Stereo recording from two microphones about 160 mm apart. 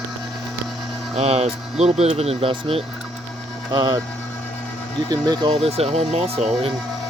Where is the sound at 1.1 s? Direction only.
40° right (ahead or behind).